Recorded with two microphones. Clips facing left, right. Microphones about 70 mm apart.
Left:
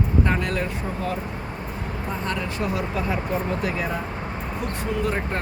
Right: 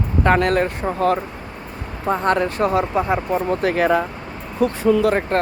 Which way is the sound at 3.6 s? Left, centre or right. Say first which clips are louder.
Right 9 dB; right.